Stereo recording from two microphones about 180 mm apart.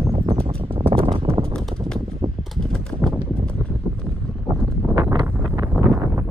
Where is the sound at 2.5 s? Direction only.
5° left (ahead or behind).